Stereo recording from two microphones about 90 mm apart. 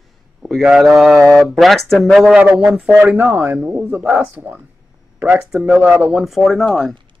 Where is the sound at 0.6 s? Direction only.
5° right (ahead or behind).